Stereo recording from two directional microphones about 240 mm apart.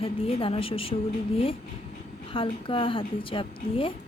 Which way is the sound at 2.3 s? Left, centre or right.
Left.